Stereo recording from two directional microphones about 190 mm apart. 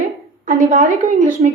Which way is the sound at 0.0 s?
35° right (ahead or behind).